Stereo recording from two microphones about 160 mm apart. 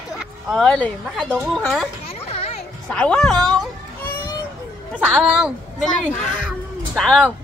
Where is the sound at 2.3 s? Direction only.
40° left (ahead or behind).